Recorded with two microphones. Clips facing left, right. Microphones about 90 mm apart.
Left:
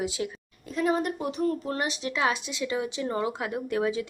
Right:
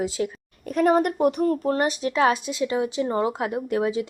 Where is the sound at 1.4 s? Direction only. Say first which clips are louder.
Right 6 dB; 40° right (ahead or behind).